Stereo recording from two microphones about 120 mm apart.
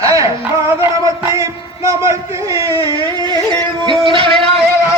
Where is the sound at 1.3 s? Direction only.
25° right (ahead or behind); by 4.3 s 45° right (ahead or behind).